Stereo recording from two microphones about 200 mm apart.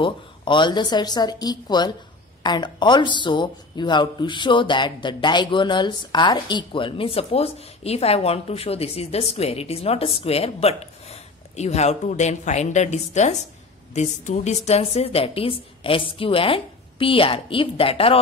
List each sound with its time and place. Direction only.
0.0 s speech: 25° left (ahead or behind)